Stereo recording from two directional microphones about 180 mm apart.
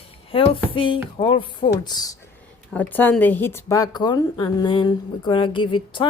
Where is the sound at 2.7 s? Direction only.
10° left (ahead or behind); by 6.1 s 25° left (ahead or behind).